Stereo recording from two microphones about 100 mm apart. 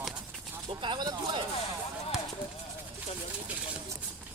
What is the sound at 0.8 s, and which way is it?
Speech, 50° right (ahead or behind).